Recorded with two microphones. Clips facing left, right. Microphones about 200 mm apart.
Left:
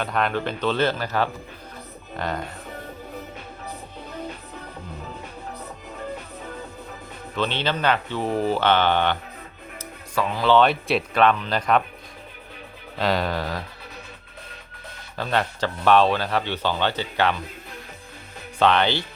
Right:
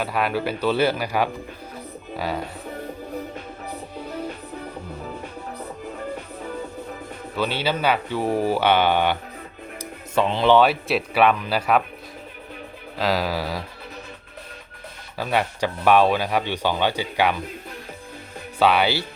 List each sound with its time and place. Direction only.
0.0 s speech: 5° right (ahead or behind)
7.3 s speech: 10° right (ahead or behind)
10.2 s speech: 25° right (ahead or behind)
10.5 s speech: 5° right (ahead or behind)
13.0 s speech: centre (ahead or behind)
15.2 s speech: 10° right (ahead or behind)
18.6 s speech: 10° right (ahead or behind)